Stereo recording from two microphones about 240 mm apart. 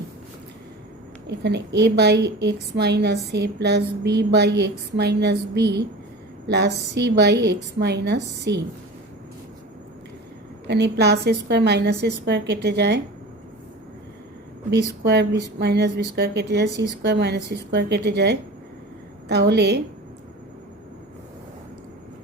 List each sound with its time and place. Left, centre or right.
1.3 s a woman's voice: right
10.7 s a woman's voice: right
15.0 s a woman's voice: right